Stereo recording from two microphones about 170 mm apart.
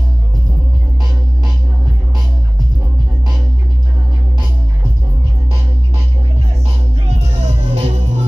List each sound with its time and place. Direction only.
7.4 s music: 40° right (ahead or behind)